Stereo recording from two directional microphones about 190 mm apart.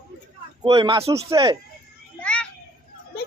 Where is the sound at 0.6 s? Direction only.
20° right (ahead or behind).